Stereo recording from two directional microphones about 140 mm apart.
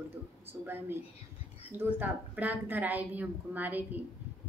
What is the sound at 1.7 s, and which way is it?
A woman's voice, 15° right (ahead or behind).